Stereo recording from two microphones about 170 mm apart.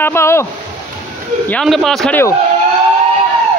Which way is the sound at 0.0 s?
15° left (ahead or behind).